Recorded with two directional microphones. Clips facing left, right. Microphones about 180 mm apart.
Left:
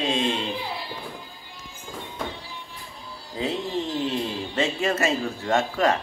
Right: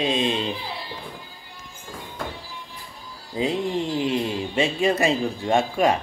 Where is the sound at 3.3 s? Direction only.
15° right (ahead or behind).